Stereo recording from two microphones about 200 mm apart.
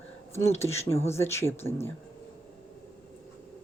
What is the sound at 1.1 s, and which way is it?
Speech, 15° left (ahead or behind).